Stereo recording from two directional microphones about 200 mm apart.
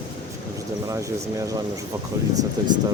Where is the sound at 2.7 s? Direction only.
20° right (ahead or behind).